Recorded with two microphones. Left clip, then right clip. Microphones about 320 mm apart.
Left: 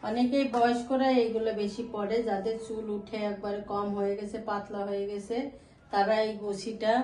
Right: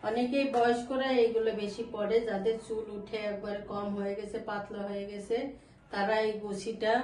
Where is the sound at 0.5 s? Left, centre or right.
Centre.